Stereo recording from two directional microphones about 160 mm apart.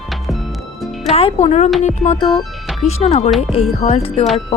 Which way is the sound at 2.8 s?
45° left (ahead or behind).